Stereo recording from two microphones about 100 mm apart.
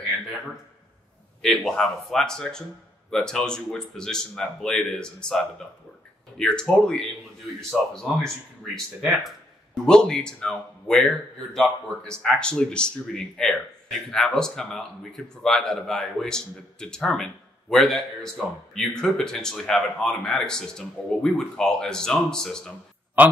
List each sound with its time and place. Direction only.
1.4 s a man's voice: 5° left (ahead or behind)
23.2 s speech: 15° right (ahead or behind)